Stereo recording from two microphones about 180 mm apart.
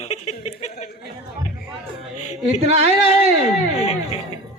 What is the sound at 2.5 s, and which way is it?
Speech, 35° right (ahead or behind).